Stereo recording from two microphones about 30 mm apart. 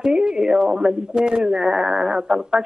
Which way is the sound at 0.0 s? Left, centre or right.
Right.